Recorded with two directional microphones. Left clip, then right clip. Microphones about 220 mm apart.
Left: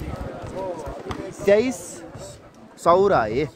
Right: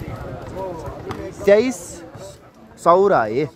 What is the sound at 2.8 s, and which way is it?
Speech, 5° right (ahead or behind).